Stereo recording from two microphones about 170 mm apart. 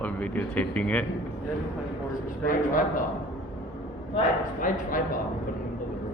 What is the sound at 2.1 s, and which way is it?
Speech, 50° left (ahead or behind).